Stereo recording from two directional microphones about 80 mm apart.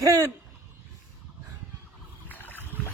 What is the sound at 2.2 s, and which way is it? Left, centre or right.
Boat, left.